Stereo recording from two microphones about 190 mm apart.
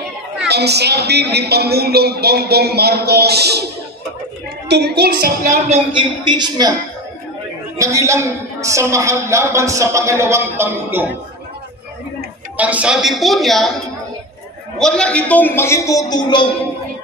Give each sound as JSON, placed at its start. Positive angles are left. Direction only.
{"t": 0.5, "sound": "a woman's voice", "side_deg": -60}
{"t": 4.6, "sound": "a woman's voice", "side_deg": -60}
{"t": 5.4, "sound": "speech", "side_deg": -40}
{"t": 5.9, "sound": "speech", "side_deg": -25}
{"t": 7.7, "sound": "a woman's voice", "side_deg": -15}
{"t": 12.5, "sound": "a woman's voice", "side_deg": -5}
{"t": 14.8, "sound": "a man's voice", "side_deg": 5}